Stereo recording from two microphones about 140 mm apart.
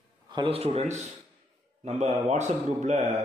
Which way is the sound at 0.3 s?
40° right (ahead or behind).